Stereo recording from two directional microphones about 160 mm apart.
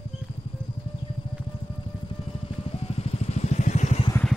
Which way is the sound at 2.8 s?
40° left (ahead or behind).